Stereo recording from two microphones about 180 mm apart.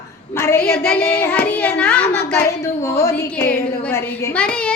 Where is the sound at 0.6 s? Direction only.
60° left (ahead or behind).